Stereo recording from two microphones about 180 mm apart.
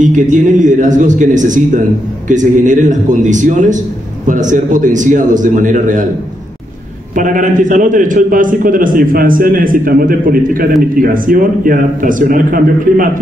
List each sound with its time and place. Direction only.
0.0 s a man's voice: 45° right (ahead or behind)
7.2 s a man's voice: 45° right (ahead or behind)